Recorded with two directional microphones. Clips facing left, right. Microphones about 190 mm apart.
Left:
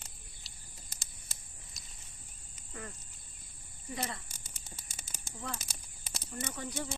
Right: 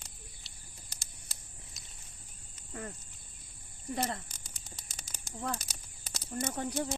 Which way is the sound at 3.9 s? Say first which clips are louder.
Right 5 dB; 50° right (ahead or behind).